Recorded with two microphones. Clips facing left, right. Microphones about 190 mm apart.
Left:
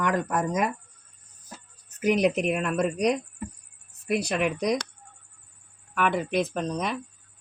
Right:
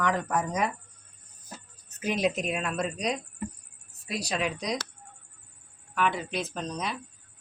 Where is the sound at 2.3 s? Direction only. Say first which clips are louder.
Left 5 dB; 60° left (ahead or behind).